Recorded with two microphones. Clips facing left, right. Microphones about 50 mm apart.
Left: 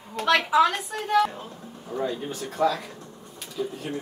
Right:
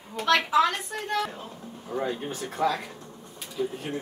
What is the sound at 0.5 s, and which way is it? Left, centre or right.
Speech, centre.